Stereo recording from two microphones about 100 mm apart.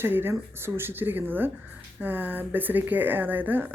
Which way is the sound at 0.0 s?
20° right (ahead or behind).